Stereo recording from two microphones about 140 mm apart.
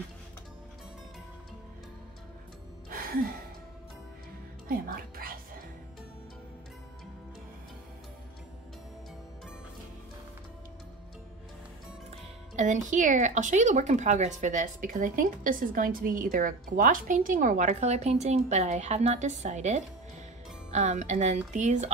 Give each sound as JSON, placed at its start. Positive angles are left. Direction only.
{"t": 2.9, "sound": "music", "side_deg": -90}
{"t": 4.6, "sound": "music", "side_deg": -90}
{"t": 12.1, "sound": "speech", "side_deg": -60}